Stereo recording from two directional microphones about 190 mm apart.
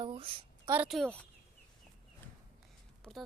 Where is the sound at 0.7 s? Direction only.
5° right (ahead or behind).